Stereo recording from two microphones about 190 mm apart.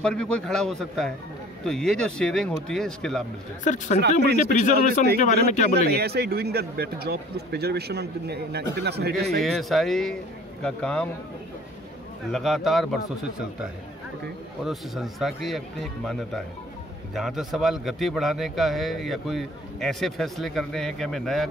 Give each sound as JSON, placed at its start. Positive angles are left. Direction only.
{"t": 0.0, "sound": "a man's voice", "side_deg": 5}
{"t": 3.6, "sound": "speech", "side_deg": 40}
{"t": 5.9, "sound": "a man's voice", "side_deg": -55}
{"t": 9.4, "sound": "a man's voice", "side_deg": 0}
{"t": 12.3, "sound": "a man's voice", "side_deg": 0}
{"t": 14.6, "sound": "a man's voice", "side_deg": 0}